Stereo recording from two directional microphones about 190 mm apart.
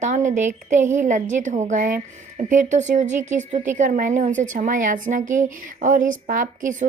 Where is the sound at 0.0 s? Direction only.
40° right (ahead or behind).